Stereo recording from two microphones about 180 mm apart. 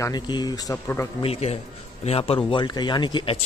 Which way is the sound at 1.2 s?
35° left (ahead or behind).